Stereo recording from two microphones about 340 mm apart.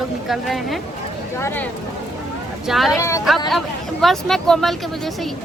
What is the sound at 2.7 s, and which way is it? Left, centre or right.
Speech, centre.